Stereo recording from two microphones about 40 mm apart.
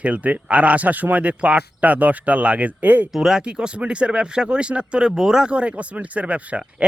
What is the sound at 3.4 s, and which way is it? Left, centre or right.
Speech, right.